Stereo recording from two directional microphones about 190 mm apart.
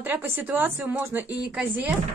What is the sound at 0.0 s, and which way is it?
Speech, 10° right (ahead or behind).